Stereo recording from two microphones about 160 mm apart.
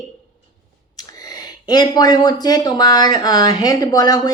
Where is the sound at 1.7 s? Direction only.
25° left (ahead or behind).